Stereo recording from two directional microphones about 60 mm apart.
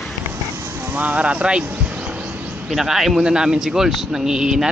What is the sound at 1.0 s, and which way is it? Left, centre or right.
Vehicle, right.